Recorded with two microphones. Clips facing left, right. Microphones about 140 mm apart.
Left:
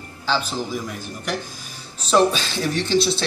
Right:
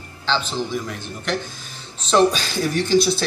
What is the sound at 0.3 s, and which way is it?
A man's voice, 5° left (ahead or behind).